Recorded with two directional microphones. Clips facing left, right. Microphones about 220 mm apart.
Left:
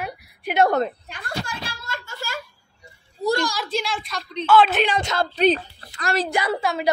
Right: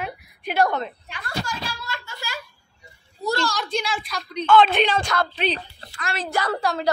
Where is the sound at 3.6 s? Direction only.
Centre (ahead or behind).